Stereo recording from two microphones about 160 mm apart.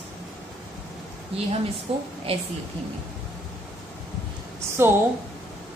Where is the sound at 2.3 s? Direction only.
40° right (ahead or behind).